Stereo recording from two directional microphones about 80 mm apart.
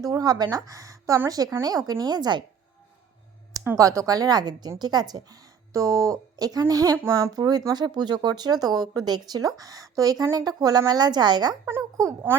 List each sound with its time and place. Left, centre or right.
0.0 s a sound: right
0.5 s a woman's voice: right
3.8 s a woman's voice: right
11.6 s a woman's voice: right